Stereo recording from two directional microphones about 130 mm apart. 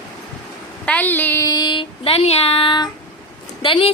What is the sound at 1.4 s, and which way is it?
Child singing, 35° left (ahead or behind).